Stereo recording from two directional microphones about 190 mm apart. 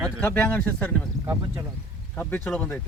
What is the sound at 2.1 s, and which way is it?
Speech, 10° left (ahead or behind).